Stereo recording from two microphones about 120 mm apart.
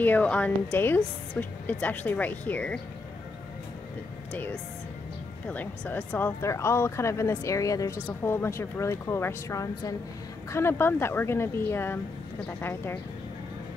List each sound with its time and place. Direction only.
0.0 s speech: 15° left (ahead or behind)
5.5 s speech: 15° left (ahead or behind)